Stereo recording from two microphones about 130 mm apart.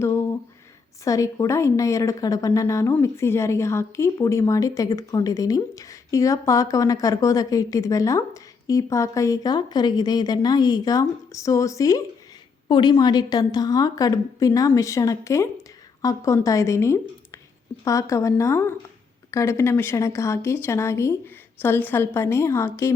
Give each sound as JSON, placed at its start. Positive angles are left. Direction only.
{"t": 1.0, "sound": "a woman's voice", "side_deg": 25}